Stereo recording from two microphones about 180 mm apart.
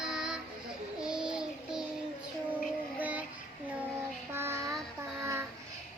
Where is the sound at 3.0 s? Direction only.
10° right (ahead or behind).